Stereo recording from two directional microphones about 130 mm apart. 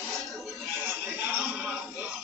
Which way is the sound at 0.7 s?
15° right (ahead or behind).